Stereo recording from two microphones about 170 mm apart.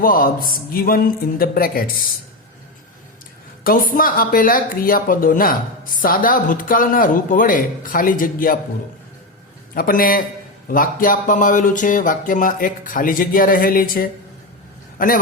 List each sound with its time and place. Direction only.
0.0 s speech: 55° left (ahead or behind)
3.6 s speech: 55° left (ahead or behind)
9.7 s a man's voice: 55° left (ahead or behind)